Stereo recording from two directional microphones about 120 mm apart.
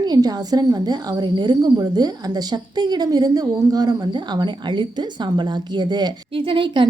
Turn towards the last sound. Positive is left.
turn(degrees=-45)  # may be behind; listen again after turning